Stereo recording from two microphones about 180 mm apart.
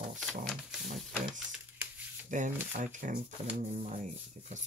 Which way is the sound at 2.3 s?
45° right (ahead or behind).